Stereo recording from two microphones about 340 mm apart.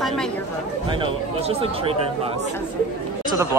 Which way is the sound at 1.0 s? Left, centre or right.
Centre.